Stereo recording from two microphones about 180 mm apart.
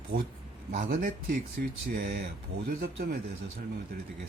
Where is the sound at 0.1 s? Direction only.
50° right (ahead or behind).